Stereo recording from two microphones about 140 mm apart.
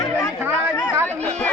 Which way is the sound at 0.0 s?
20° left (ahead or behind).